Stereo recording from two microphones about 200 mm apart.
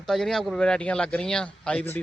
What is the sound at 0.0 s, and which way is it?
Speech, centre (ahead or behind).